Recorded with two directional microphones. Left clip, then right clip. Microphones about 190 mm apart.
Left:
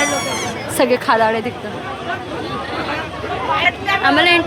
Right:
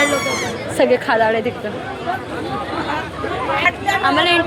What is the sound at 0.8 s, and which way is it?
Speech, 10° left (ahead or behind).